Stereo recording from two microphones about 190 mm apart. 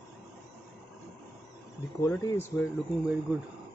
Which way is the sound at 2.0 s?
15° left (ahead or behind).